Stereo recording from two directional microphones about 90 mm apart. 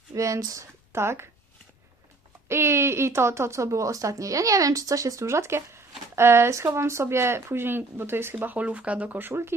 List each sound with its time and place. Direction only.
0.1 s speech: 35° right (ahead or behind)
2.5 s speech: 30° right (ahead or behind)